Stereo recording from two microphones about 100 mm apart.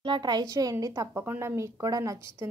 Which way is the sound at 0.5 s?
35° right (ahead or behind).